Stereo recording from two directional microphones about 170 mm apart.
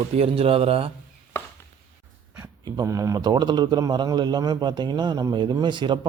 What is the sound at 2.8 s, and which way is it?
A man's voice, 20° right (ahead or behind).